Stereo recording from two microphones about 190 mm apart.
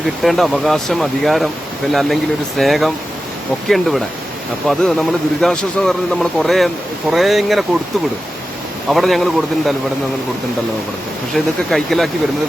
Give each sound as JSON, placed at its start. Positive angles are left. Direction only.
{"t": 0.0, "sound": "speech", "side_deg": 0}
{"t": 8.9, "sound": "speech", "side_deg": 0}
{"t": 11.3, "sound": "speech", "side_deg": 0}